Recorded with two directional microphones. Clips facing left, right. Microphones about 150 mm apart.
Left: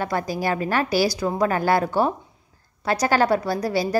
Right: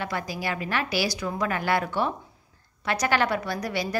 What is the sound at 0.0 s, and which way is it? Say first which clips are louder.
A woman's voice: left 6 dB; 45° left (ahead or behind).